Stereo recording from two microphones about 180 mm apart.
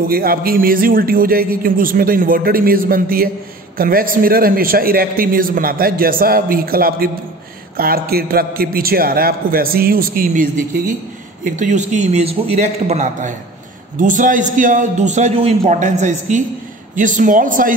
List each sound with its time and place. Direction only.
0.1 s a man's voice: 55° right (ahead or behind)